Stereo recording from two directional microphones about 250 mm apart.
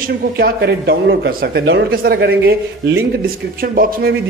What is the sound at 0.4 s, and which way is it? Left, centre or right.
A man's voice, right.